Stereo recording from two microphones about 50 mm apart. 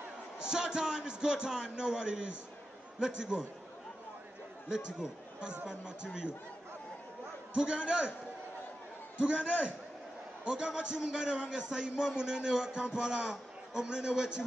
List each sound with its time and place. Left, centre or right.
0.5 s a man's voice: centre
4.6 s a man's voice: centre
7.5 s a man's voice: centre
9.2 s a man's voice: right
10.4 s a man's voice: centre